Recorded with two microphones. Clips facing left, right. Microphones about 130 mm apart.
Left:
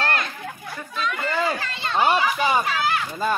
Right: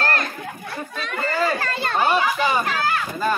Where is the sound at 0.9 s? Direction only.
45° right (ahead or behind).